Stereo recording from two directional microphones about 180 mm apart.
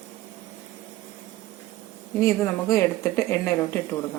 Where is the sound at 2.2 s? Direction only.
15° left (ahead or behind).